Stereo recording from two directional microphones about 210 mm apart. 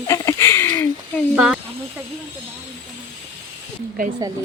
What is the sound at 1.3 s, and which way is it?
Speech, 5° right (ahead or behind).